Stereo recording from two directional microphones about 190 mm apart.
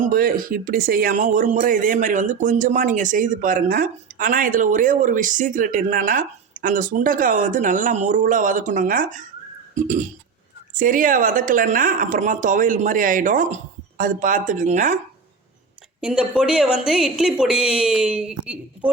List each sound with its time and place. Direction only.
0.0 s speech: 50° right (ahead or behind)
16.0 s a woman's voice: 5° right (ahead or behind)